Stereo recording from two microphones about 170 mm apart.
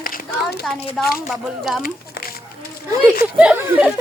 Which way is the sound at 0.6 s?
Centre (ahead or behind).